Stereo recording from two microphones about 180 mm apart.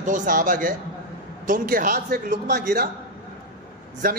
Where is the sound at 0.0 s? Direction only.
45° right (ahead or behind).